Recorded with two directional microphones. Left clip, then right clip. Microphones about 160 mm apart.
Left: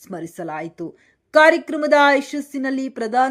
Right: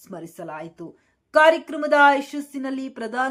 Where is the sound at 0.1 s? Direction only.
30° left (ahead or behind).